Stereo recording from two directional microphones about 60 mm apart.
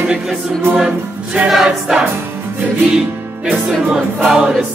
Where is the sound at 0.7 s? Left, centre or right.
Centre.